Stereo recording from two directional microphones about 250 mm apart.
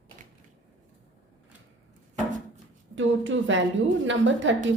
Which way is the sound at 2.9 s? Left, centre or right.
Right.